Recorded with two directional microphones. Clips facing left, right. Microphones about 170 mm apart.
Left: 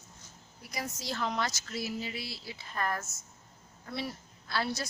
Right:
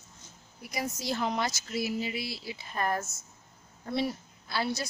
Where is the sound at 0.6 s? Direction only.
15° right (ahead or behind).